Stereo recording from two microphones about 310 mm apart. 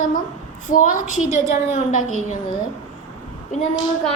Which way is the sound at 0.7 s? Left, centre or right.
Left.